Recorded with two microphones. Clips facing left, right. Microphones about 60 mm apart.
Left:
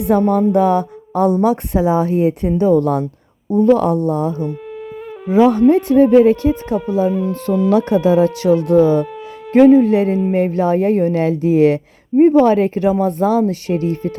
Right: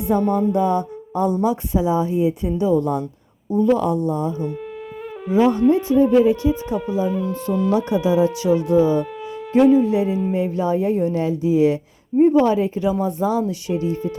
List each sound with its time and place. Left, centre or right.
0.3 s speech: left
7.1 s speech: centre
7.7 s speech: left